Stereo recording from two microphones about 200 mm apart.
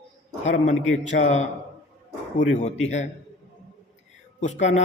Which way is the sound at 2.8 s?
35° left (ahead or behind).